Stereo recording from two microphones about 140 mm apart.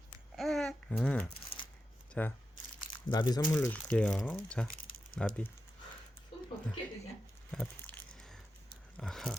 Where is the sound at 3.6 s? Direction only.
10° left (ahead or behind).